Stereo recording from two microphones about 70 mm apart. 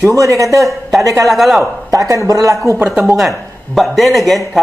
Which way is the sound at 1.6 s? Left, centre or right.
Right.